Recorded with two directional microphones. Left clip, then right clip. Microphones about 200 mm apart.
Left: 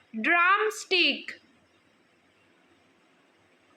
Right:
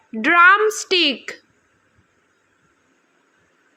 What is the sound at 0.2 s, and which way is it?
A woman's voice, 30° right (ahead or behind).